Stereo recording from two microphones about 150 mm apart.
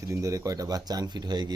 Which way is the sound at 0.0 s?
20° right (ahead or behind).